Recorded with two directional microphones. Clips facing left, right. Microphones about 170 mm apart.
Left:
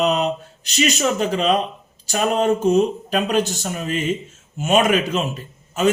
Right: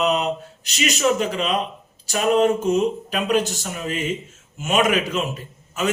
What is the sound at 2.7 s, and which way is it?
Speech, 35° left (ahead or behind).